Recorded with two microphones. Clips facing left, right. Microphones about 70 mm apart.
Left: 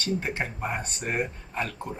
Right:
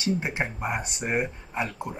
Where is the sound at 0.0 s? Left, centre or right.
Centre.